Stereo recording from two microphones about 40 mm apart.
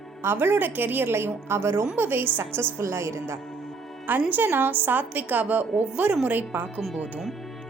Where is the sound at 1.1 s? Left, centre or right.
Right.